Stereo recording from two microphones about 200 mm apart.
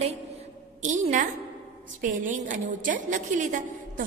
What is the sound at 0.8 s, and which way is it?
A woman's voice, 35° right (ahead or behind).